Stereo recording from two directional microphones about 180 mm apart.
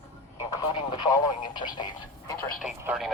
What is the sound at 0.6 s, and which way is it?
Speech, 25° left (ahead or behind).